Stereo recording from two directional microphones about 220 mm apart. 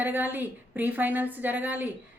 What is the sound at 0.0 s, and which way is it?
Speech, 10° right (ahead or behind).